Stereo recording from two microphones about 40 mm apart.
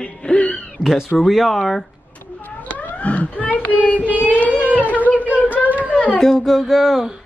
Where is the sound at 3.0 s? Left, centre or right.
Left.